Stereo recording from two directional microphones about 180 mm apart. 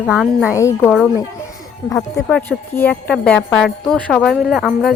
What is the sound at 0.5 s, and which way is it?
Speech, 15° left (ahead or behind).